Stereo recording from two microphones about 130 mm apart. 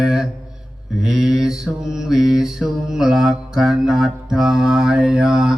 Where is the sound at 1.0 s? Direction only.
5° right (ahead or behind).